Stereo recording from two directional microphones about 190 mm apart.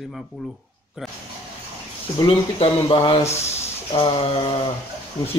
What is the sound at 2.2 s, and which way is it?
Speech, 25° left (ahead or behind).